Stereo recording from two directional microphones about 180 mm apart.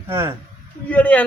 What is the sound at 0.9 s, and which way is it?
Speech, 10° left (ahead or behind).